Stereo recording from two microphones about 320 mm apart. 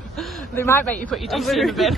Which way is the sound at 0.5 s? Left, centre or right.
Centre.